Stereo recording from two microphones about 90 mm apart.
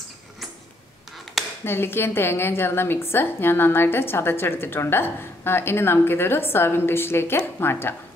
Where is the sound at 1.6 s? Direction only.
25° left (ahead or behind).